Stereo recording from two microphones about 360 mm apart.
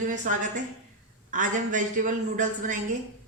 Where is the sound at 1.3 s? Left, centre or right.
Right.